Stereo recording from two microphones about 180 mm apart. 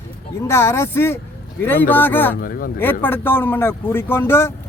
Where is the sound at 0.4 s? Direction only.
15° left (ahead or behind).